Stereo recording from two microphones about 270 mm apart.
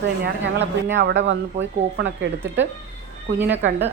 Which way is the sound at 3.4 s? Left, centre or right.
Centre.